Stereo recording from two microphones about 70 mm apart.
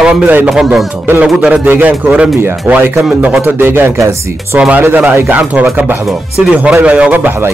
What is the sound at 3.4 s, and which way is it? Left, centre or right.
Speech, right.